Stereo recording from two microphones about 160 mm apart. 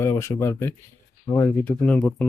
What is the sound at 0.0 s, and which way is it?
Speech, 15° left (ahead or behind).